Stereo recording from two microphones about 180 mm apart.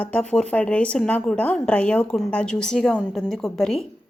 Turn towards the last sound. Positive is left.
turn(degrees=0)  # may be behind; listen again after turning